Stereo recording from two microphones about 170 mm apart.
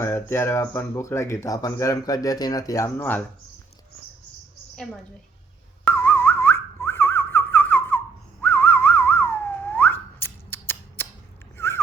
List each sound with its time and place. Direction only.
0.0 s speech: 15° left (ahead or behind)
5.8 s whistling: 10° left (ahead or behind)
11.5 s dog: 15° left (ahead or behind)